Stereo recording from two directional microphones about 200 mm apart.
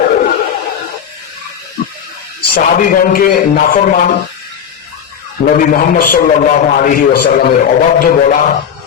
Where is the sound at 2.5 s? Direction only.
45° left (ahead or behind).